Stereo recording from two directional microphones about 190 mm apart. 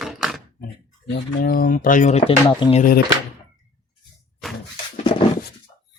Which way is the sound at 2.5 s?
25° left (ahead or behind).